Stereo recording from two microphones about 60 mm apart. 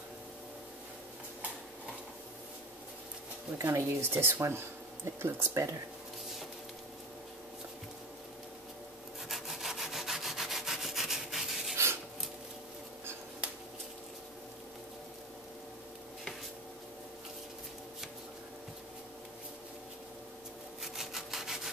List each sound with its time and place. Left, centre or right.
3.5 s speech: right
4.0 s speech: right
9.3 s wood: centre
11.7 s rub: right
20.8 s wood: centre